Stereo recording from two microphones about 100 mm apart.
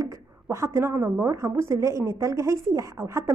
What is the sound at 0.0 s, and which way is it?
A woman's voice, 30° right (ahead or behind).